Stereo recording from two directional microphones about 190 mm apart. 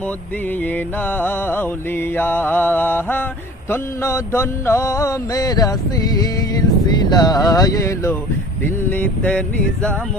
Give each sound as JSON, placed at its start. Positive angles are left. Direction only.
{"t": 0.6, "sound": "music", "side_deg": 10}
{"t": 6.8, "sound": "speech", "side_deg": 20}
{"t": 8.6, "sound": "music", "side_deg": 10}